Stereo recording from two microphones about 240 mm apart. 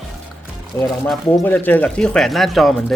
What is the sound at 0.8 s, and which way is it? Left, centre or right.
Speech, centre.